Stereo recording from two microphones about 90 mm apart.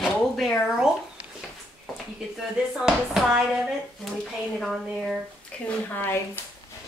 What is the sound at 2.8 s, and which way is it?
Speech, 5° right (ahead or behind).